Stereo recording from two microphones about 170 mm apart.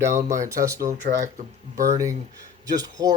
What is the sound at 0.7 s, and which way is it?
Speech, 55° right (ahead or behind).